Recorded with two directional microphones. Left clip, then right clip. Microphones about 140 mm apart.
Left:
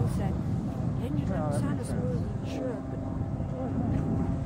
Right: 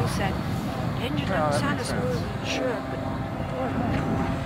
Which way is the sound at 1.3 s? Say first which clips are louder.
Right 10 dB; 25° right (ahead or behind).